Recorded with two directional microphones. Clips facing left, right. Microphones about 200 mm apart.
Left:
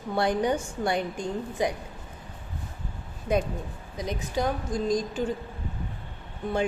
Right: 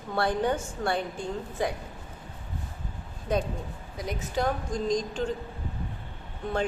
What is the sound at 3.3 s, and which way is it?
A woman's voice, 10° left (ahead or behind).